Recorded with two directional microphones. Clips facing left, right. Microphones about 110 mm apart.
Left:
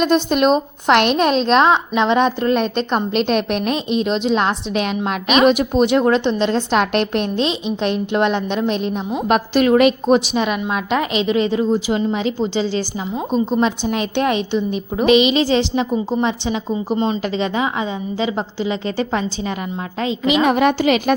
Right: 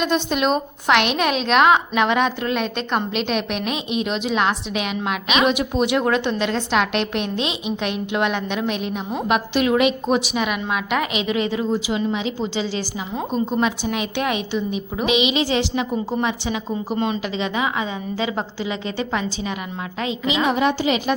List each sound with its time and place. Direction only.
0.0 s a woman's voice: 45° left (ahead or behind)
5.9 s a woman's voice: 30° left (ahead or behind)
10.2 s a woman's voice: 30° left (ahead or behind)
11.9 s a woman's voice: 40° left (ahead or behind)
13.3 s a woman's voice: 20° left (ahead or behind)
13.6 s a woman's voice: 35° left (ahead or behind)
16.9 s a woman's voice: 25° left (ahead or behind)
17.2 s a woman's voice: 35° left (ahead or behind)
20.2 s a woman's voice: 55° left (ahead or behind)